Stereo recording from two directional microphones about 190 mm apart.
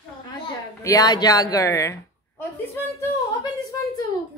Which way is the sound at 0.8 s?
20° left (ahead or behind).